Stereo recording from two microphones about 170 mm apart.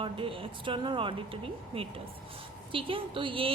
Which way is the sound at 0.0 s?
30° right (ahead or behind).